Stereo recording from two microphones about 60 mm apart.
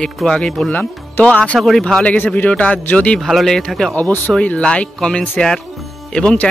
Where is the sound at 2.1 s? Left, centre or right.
Left.